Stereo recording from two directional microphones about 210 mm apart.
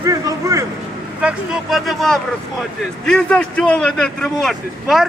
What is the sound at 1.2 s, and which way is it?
A man's voice, centre (ahead or behind).